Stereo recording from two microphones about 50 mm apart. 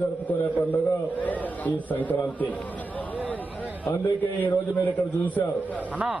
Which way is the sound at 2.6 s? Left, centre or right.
Left.